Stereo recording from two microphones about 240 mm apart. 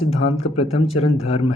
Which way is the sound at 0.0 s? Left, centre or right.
Left.